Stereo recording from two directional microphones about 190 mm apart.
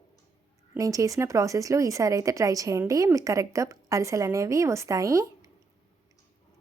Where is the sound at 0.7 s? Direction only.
15° right (ahead or behind).